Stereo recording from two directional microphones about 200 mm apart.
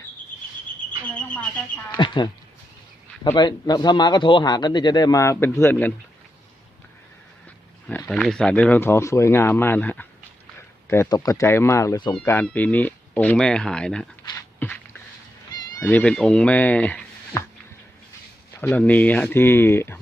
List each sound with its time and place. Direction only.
1.0 s a sound: 5° left (ahead or behind)
2.0 s speech: 25° left (ahead or behind)
3.3 s speech: 20° left (ahead or behind)
7.9 s speech: 5° left (ahead or behind)
14.3 s a sound: 10° left (ahead or behind)
15.8 s speech: 10° left (ahead or behind)
18.5 s speech: 10° left (ahead or behind)